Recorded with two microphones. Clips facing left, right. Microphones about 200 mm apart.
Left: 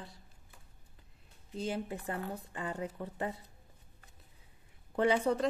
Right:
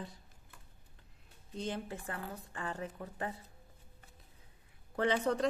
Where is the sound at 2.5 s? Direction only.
20° left (ahead or behind).